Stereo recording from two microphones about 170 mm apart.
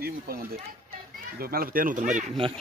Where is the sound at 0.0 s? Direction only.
60° right (ahead or behind).